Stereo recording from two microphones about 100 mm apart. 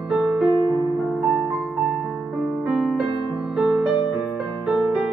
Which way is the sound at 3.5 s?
5° right (ahead or behind).